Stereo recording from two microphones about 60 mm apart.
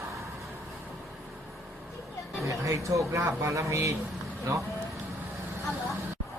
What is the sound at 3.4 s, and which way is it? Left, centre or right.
Speech, right.